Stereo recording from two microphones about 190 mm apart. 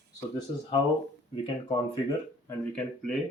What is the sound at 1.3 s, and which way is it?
Speech, 25° left (ahead or behind).